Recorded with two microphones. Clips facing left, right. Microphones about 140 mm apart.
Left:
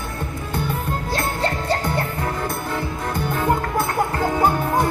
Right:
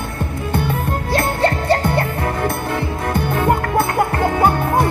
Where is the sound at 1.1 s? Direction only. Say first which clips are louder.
Right 7 dB; 60° right (ahead or behind).